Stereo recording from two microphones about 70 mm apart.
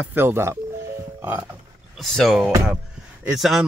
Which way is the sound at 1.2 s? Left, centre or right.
Right.